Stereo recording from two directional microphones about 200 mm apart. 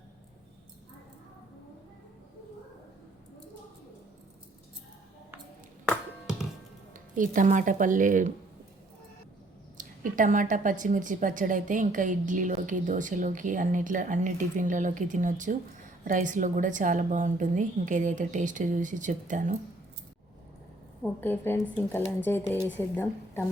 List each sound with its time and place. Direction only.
7.2 s a woman's voice: 40° right (ahead or behind)
9.7 s a woman's voice: 40° right (ahead or behind)
21.0 s a woman's voice: 10° left (ahead or behind)